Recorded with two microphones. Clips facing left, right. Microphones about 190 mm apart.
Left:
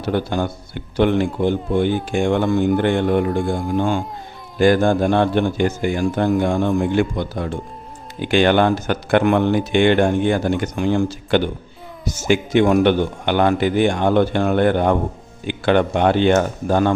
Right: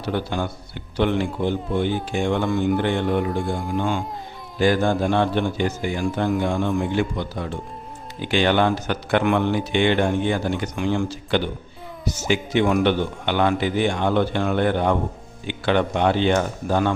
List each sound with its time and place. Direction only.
0.0 s speech: 45° left (ahead or behind)